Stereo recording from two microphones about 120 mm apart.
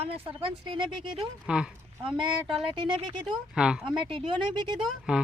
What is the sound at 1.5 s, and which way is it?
Speech, 5° right (ahead or behind).